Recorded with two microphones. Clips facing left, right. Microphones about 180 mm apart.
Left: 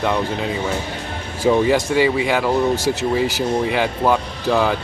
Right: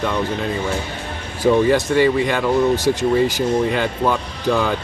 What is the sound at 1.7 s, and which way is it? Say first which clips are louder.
Speech: right 1 dB; 10° left (ahead or behind).